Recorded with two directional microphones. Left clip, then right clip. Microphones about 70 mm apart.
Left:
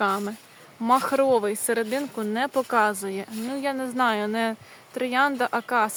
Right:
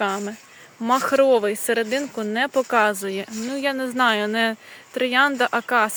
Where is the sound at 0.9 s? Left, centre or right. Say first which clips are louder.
Right 5 dB; right.